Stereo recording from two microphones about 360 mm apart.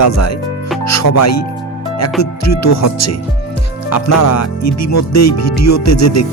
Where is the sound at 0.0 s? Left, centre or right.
Left.